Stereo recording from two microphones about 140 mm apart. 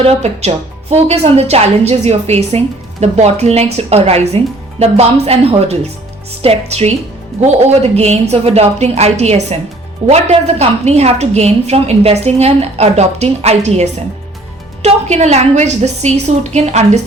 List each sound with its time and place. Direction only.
0.0 s a woman's voice: 50° right (ahead or behind)